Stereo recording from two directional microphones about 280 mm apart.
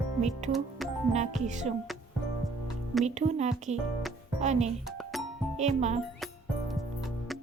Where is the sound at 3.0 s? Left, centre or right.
Right.